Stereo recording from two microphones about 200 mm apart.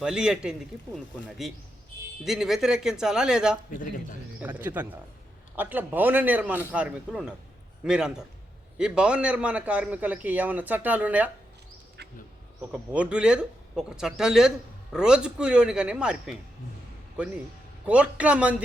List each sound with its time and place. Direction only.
0.0 s speech: 5° right (ahead or behind)
3.7 s speech: 40° left (ahead or behind)
4.4 s a man's voice: 10° right (ahead or behind)
12.0 s bee: 55° right (ahead or behind)
12.7 s speech: 5° right (ahead or behind)
17.8 s a man's voice: 5° right (ahead or behind)